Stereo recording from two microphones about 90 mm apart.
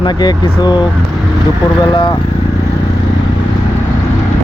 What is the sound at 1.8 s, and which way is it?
Speech, 55° left (ahead or behind).